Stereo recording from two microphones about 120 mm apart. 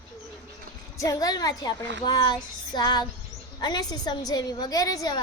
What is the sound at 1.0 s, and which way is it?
A woman's voice, 30° left (ahead or behind).